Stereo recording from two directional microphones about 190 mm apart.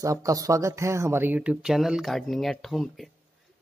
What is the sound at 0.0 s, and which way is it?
Speech, 15° right (ahead or behind).